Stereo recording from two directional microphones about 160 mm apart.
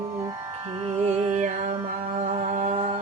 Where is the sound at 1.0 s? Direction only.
45° right (ahead or behind).